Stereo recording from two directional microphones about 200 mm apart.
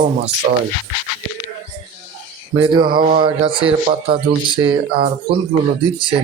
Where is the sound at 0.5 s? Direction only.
40° right (ahead or behind).